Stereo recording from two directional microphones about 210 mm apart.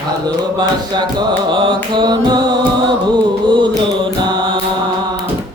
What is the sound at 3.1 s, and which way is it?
Music, 20° right (ahead or behind).